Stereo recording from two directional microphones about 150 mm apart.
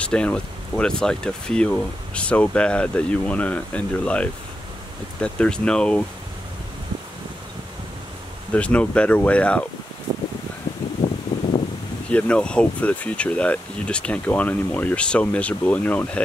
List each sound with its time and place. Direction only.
0.0 s speech: 5° left (ahead or behind)
8.5 s speech: 10° left (ahead or behind)
11.3 s a sound: 40° left (ahead or behind)
12.1 s speech: 10° left (ahead or behind)